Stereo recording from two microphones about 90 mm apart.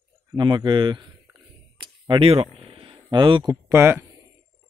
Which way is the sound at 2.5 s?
90° right.